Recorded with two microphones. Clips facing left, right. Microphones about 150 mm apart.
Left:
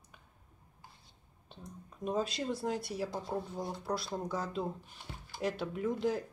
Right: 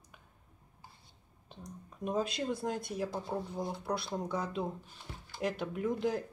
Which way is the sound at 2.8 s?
50° right (ahead or behind).